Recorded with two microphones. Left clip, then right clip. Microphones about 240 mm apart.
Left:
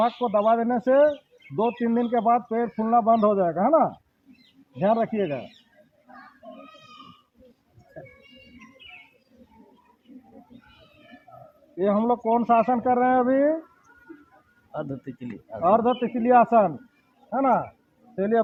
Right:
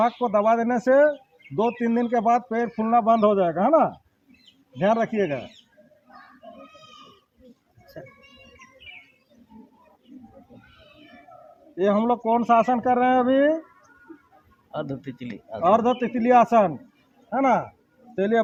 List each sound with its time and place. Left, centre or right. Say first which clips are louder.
0.2 s speech: right 1 dB; right
8.0 s speech: right 2 dB; right
11.8 s speech: right 1 dB; right
14.7 s speech: right 2 dB; right